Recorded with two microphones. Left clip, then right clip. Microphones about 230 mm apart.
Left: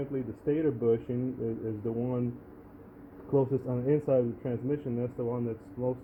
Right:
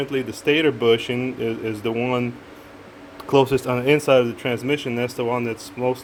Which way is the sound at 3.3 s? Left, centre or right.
Right.